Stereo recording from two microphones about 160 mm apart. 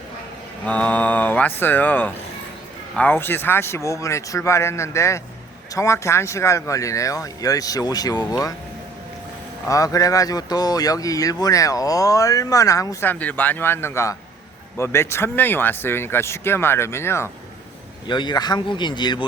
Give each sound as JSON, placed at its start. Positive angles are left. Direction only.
{"t": 0.6, "sound": "speech", "side_deg": 10}
{"t": 9.6, "sound": "speech", "side_deg": 20}
{"t": 18.1, "sound": "speech", "side_deg": 30}